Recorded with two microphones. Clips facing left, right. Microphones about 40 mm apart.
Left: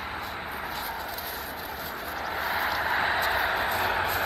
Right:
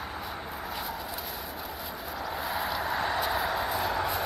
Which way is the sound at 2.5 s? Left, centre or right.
Centre.